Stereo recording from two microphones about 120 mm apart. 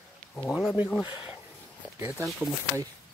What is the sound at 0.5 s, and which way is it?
Speech, 5° right (ahead or behind).